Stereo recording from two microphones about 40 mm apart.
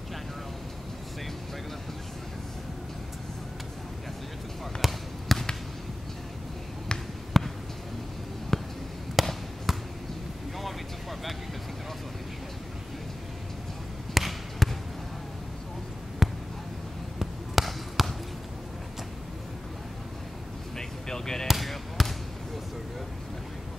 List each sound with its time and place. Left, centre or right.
4.8 s basketball bounce: centre
7.3 s a sound: centre
8.5 s a sound: centre
9.2 s basketball bounce: centre
10.6 s vehicle: centre
14.1 s basketball bounce: centre
16.2 s basketball bounce: centre
20.7 s vehicle: centre
21.5 s basketball bounce: centre